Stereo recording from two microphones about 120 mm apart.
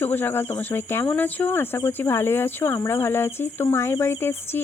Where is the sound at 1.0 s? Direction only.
15° left (ahead or behind).